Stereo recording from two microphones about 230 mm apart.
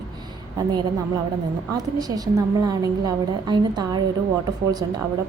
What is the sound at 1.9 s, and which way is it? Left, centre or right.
A woman's voice, centre.